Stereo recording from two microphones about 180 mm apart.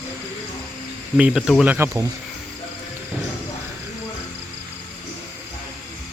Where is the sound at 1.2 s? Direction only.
5° right (ahead or behind).